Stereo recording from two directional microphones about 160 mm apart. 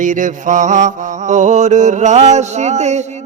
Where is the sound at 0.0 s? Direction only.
55° right (ahead or behind).